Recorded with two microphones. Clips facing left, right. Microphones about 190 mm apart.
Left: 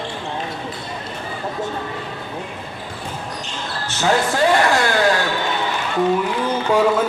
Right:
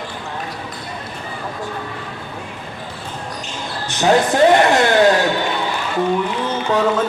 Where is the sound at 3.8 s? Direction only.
15° right (ahead or behind).